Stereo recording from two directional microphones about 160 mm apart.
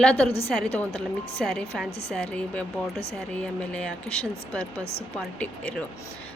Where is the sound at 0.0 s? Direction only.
5° left (ahead or behind).